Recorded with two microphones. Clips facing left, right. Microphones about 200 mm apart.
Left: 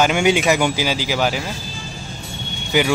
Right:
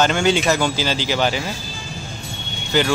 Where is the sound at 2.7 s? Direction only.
10° left (ahead or behind).